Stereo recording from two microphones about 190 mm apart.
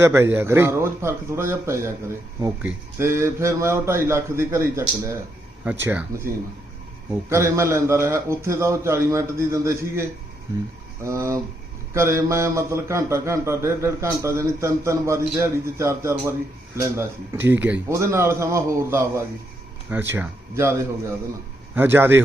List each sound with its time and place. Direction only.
0.0 s a man's voice: 15° right (ahead or behind)